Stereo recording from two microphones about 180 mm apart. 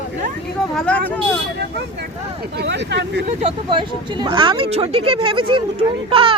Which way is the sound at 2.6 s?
75° right (ahead or behind).